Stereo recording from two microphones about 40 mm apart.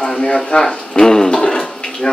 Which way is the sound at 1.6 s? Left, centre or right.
Centre.